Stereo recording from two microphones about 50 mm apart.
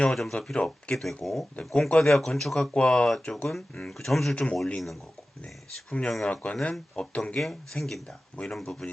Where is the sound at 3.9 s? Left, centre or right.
Centre.